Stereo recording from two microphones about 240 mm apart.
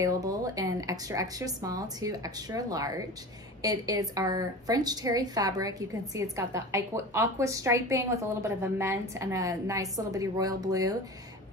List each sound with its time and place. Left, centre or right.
0.0 s a woman's voice: centre